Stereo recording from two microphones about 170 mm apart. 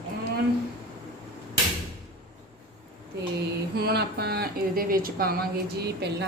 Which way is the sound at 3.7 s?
70° right (ahead or behind).